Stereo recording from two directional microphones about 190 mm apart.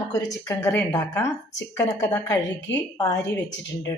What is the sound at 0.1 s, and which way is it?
A woman's voice, 15° left (ahead or behind).